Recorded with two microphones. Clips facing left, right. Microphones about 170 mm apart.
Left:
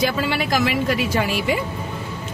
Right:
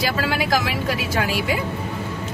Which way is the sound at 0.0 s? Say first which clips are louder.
Left 1 dB; 5° right (ahead or behind).